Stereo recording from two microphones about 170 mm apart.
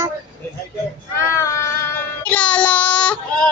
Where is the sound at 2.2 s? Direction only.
10° left (ahead or behind).